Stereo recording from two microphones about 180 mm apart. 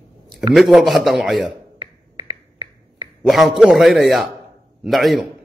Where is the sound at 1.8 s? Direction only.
25° right (ahead or behind).